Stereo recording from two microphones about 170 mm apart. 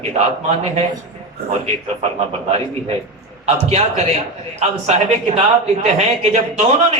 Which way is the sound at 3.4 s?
40° right (ahead or behind).